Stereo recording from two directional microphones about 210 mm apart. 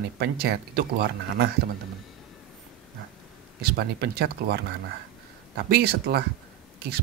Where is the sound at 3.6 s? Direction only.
50° right (ahead or behind).